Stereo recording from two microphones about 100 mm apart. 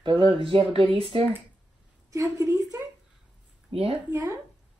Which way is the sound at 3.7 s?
75° right (ahead or behind).